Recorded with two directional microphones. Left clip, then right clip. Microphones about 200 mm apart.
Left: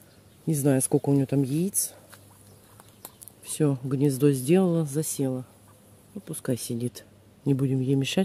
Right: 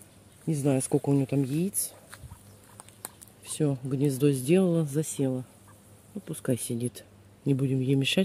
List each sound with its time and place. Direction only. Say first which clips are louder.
0.5 s speech: left 3 dB; 20° left (ahead or behind)
3.4 s speech: left 3 dB; 15° left (ahead or behind)
4.8 s speech: left 1 dB; centre (ahead or behind)